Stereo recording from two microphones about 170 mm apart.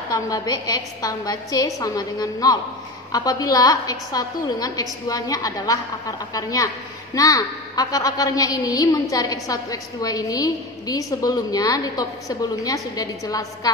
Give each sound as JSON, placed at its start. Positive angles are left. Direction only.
{"t": 0.1, "sound": "a woman's voice", "side_deg": 20}